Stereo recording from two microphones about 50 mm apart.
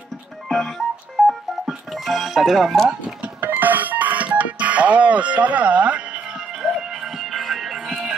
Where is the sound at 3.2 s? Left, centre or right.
Right.